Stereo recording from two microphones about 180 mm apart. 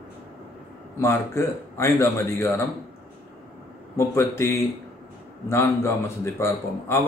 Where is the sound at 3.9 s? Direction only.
15° left (ahead or behind).